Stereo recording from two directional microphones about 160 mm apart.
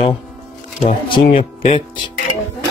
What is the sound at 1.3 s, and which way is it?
Speech, 40° left (ahead or behind).